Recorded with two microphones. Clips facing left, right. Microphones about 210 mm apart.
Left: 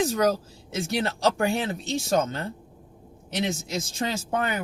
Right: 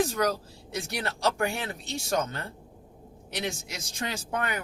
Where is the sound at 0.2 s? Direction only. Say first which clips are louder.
Left 4 dB; 20° left (ahead or behind).